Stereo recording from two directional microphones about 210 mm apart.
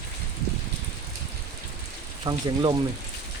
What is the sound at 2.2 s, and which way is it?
Speech, 20° right (ahead or behind).